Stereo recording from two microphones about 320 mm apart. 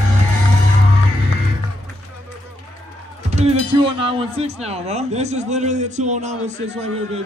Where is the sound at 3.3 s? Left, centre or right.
Centre.